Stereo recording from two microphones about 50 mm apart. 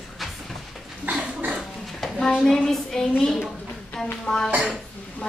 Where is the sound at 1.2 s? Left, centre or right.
Centre.